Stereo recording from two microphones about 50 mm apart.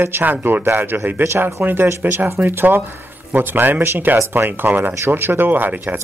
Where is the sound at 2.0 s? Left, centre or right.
Right.